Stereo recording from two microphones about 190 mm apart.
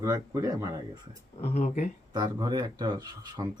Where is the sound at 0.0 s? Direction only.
20° right (ahead or behind).